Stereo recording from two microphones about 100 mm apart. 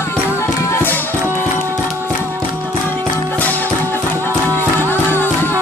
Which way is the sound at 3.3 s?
15° left (ahead or behind).